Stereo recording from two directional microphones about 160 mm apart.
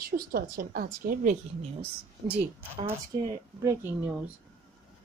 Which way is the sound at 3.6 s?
15° right (ahead or behind).